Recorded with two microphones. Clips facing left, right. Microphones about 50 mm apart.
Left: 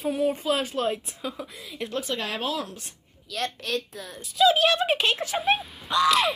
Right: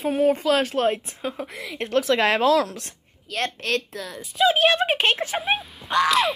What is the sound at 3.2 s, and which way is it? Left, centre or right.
Speech, right.